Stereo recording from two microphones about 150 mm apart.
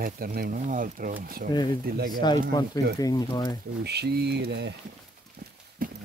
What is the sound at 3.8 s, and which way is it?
Speech, 90° right.